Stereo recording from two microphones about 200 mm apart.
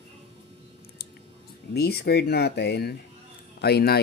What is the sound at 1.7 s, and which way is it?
A man's voice, 55° left (ahead or behind).